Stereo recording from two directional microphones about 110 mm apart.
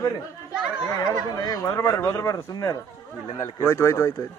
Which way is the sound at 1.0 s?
35° left (ahead or behind).